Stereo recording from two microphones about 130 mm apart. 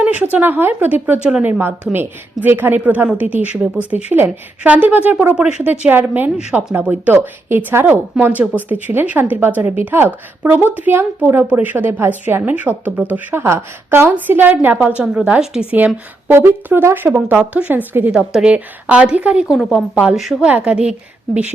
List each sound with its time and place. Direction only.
0.0 s a woman's voice: 10° right (ahead or behind)